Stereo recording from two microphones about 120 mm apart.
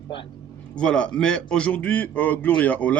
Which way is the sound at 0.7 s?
10° left (ahead or behind).